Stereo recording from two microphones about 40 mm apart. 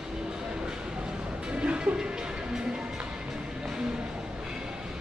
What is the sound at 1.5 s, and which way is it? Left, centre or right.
Music, right.